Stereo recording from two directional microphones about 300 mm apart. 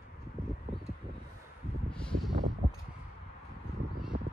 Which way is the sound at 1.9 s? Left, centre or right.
Centre.